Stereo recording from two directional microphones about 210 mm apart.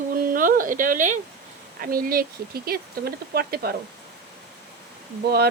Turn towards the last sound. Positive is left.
turn(degrees=-50)  # may be behind; listen again after turning